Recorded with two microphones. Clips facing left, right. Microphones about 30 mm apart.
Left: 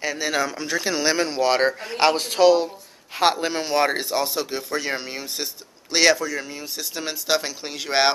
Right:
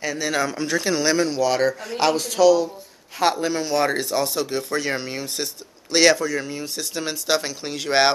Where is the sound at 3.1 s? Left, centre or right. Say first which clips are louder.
Even; left.